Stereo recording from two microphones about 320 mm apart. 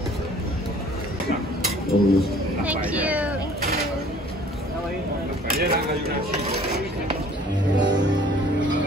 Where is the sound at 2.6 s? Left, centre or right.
Centre.